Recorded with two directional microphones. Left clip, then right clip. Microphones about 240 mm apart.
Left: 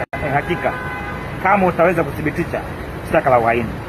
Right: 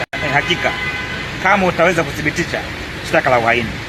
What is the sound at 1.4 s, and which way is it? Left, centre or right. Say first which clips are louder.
Speech: right 1 dB; centre.